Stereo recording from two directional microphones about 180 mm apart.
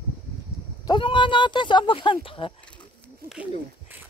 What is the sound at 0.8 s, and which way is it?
Speech, 25° left (ahead or behind).